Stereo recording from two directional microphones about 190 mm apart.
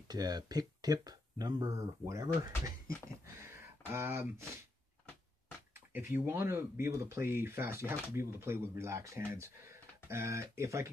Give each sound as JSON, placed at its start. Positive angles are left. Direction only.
{"t": 0.1, "sound": "speech", "side_deg": -20}
{"t": 3.3, "sound": "a sound", "side_deg": -15}
{"t": 5.9, "sound": "speech", "side_deg": -10}